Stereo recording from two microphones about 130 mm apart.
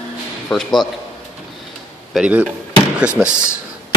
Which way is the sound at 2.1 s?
10° right (ahead or behind).